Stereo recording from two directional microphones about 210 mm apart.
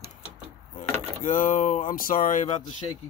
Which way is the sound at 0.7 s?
40° left (ahead or behind).